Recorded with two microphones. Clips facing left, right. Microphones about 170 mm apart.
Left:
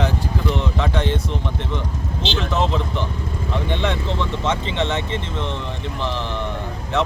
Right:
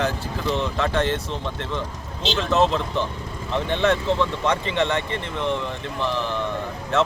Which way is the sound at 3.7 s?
20° left (ahead or behind).